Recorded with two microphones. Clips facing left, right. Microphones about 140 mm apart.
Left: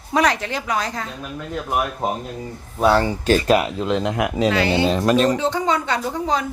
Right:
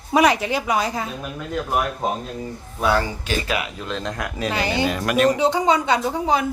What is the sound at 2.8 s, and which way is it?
Speech, 35° left (ahead or behind).